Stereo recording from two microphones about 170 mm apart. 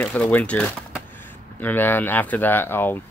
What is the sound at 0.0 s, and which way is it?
Speech, 10° left (ahead or behind).